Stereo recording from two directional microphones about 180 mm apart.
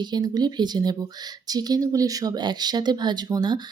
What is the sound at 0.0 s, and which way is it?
Speech, 25° right (ahead or behind).